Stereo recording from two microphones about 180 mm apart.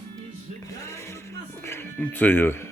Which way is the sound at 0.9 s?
15° left (ahead or behind).